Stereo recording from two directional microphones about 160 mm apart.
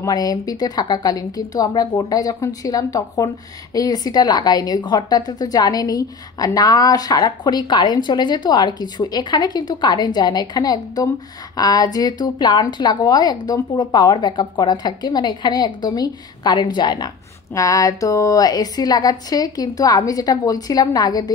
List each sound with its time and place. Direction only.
0.0 s a woman's voice: 25° left (ahead or behind)